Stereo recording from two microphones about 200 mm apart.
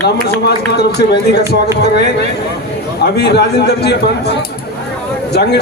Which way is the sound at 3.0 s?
55° left (ahead or behind).